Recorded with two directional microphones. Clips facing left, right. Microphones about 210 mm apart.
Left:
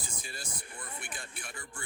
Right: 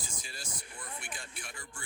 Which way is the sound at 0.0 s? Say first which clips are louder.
Left 2 dB; 55° left (ahead or behind).